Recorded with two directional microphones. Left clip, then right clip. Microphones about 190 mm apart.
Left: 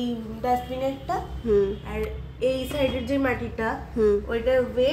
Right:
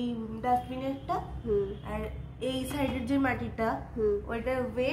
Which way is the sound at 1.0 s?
25° left (ahead or behind).